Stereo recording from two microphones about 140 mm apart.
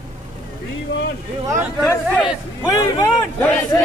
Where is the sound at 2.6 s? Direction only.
20° left (ahead or behind).